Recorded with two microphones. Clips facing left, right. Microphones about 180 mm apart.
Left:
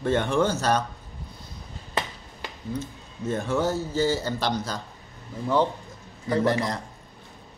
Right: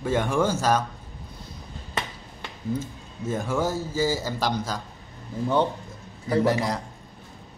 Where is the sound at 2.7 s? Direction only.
10° right (ahead or behind).